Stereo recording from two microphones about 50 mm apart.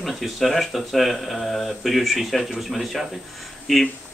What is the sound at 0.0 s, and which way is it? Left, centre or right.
Speech, centre.